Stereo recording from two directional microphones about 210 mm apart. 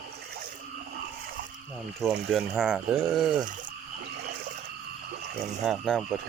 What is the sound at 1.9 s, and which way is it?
Speech, centre (ahead or behind).